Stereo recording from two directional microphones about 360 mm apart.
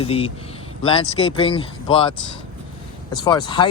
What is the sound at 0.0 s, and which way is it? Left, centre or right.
Speech, centre.